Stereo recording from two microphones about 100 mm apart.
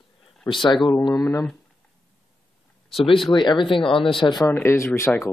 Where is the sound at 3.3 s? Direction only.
50° left (ahead or behind).